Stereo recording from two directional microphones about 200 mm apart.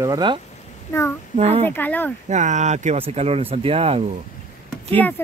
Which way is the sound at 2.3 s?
35° right (ahead or behind).